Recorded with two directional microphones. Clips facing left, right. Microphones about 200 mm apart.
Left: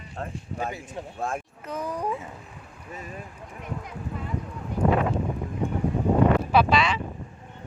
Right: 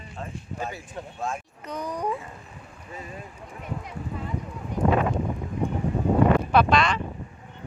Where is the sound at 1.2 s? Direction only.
55° left (ahead or behind).